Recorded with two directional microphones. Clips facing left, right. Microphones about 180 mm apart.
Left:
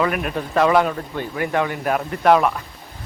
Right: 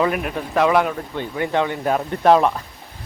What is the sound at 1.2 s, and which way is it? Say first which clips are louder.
Speech: right 1 dB; 20° right (ahead or behind).